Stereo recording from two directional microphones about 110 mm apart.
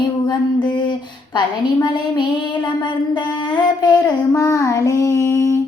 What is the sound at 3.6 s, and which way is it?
Speech, 40° left (ahead or behind).